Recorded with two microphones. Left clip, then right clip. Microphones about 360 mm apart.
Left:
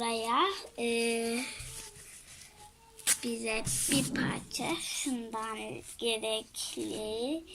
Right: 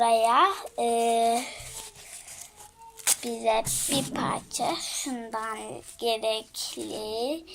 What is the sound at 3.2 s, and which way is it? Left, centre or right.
A woman's voice, centre.